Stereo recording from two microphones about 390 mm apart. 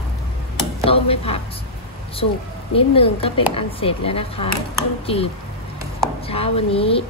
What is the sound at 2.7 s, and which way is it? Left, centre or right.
A woman's voice, centre.